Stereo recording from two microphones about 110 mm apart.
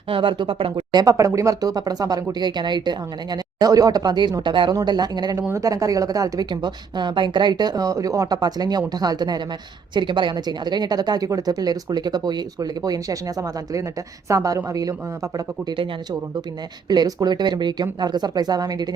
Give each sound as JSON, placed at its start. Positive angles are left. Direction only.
{"t": 0.1, "sound": "speech", "side_deg": -50}
{"t": 0.9, "sound": "a woman's voice", "side_deg": -30}
{"t": 5.4, "sound": "a woman's voice", "side_deg": -25}
{"t": 16.9, "sound": "a woman's voice", "side_deg": -35}